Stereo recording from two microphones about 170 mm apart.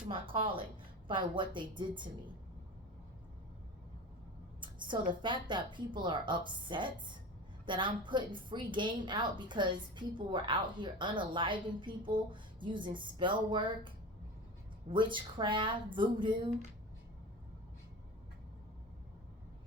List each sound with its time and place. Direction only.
0.1 s a woman's voice: 30° right (ahead or behind)
4.6 s a woman's voice: 30° right (ahead or behind)